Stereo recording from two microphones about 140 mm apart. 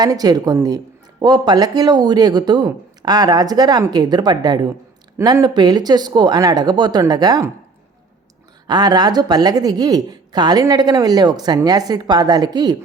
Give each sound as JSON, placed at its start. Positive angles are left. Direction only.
{"t": 0.0, "sound": "a woman's voice", "side_deg": -25}
{"t": 8.6, "sound": "a woman's voice", "side_deg": -30}